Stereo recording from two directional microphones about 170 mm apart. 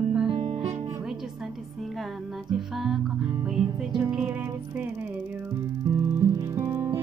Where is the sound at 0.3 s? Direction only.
30° right (ahead or behind).